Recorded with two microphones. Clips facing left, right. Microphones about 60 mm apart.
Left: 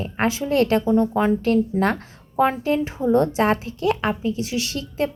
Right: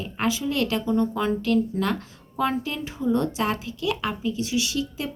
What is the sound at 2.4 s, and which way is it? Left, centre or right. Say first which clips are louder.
A woman's voice: left 6 dB; left.